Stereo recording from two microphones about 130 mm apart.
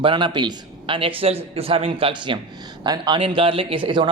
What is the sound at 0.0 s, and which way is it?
A man's voice, 40° right (ahead or behind).